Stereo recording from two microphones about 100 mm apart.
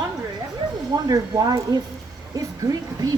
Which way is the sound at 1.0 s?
40° right (ahead or behind).